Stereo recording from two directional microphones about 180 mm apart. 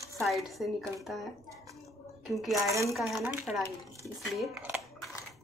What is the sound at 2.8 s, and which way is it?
Speech, centre (ahead or behind).